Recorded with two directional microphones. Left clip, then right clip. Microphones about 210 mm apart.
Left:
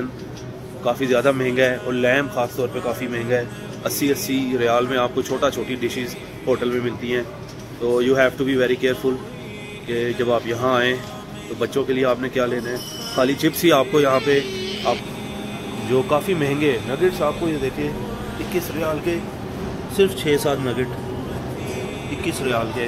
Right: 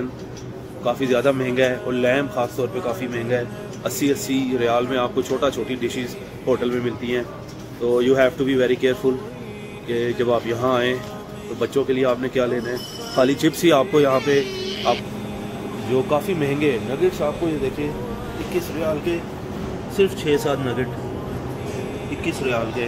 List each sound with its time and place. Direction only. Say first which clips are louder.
0.8 s speech: left 1 dB; centre (ahead or behind)
14.4 s a sound: right 1 dB; 60° right (ahead or behind)
15.9 s speech: left 1 dB; 5° left (ahead or behind)
18.8 s speech: even; 5° left (ahead or behind)
22.2 s speech: left 1 dB; 5° left (ahead or behind)